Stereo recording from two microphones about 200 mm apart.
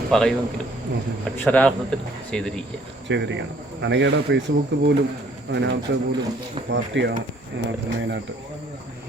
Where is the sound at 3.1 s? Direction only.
60° right (ahead or behind).